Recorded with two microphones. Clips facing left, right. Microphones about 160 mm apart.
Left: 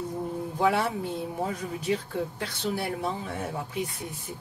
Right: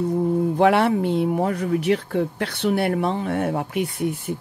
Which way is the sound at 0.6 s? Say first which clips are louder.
Right 6 dB; 70° right (ahead or behind).